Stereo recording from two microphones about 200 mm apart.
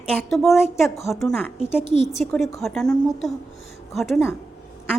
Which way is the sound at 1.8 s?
35° left (ahead or behind).